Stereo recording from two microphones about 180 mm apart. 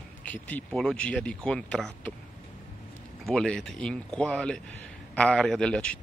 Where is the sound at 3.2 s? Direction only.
5° left (ahead or behind).